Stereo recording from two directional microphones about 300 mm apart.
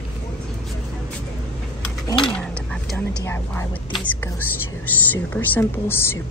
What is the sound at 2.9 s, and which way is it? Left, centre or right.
Speech, centre.